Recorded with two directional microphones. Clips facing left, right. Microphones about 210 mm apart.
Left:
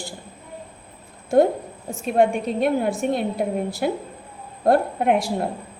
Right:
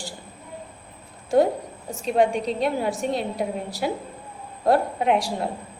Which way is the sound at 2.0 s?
55° left (ahead or behind).